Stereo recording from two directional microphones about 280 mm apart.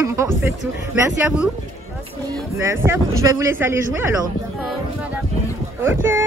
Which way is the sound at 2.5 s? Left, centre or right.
Centre.